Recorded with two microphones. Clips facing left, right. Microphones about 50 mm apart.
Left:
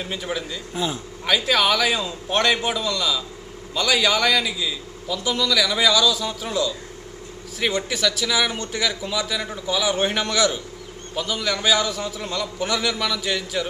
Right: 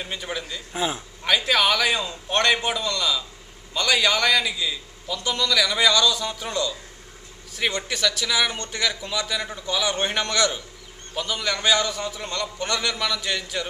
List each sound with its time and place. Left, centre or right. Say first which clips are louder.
0.0 s a man's voice: left 3 dB; centre
0.7 s a man's voice: even; centre